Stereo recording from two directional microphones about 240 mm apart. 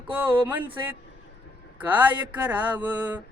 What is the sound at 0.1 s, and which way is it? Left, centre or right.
Speech, centre.